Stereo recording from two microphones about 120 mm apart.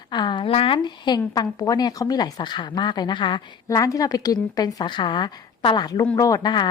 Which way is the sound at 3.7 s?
25° left (ahead or behind).